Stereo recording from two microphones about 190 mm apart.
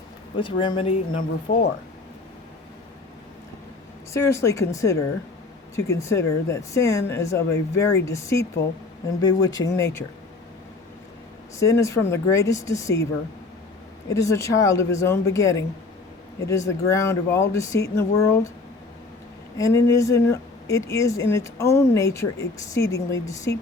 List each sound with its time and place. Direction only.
0.3 s speech: 25° left (ahead or behind)
4.1 s speech: 15° left (ahead or behind)
11.6 s speech: 15° left (ahead or behind)
14.1 s speech: 15° left (ahead or behind)
19.5 s speech: 15° left (ahead or behind)